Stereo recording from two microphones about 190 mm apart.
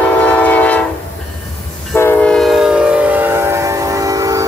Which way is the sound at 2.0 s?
10° left (ahead or behind).